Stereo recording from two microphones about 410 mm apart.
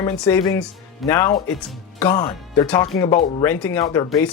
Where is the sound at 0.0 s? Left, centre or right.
Centre.